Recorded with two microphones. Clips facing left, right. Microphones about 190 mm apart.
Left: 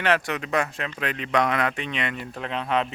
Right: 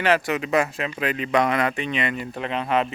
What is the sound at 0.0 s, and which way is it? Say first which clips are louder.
Speech: right 3 dB; 5° right (ahead or behind).